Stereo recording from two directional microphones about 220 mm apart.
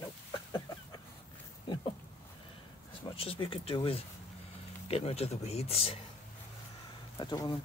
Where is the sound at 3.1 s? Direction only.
25° left (ahead or behind).